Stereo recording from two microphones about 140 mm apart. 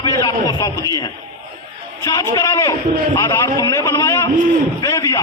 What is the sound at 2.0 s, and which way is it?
A man's voice, 25° left (ahead or behind).